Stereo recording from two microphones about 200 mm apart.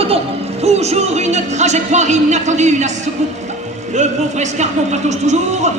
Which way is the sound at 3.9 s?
35° right (ahead or behind).